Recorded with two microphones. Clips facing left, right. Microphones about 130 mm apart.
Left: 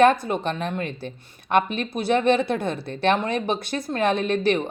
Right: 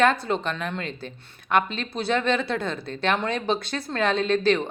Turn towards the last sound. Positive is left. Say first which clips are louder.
# even
turn(degrees=20)  # may be behind; listen again after turning